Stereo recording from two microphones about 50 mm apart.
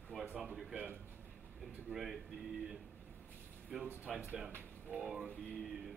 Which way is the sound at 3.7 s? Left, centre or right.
Centre.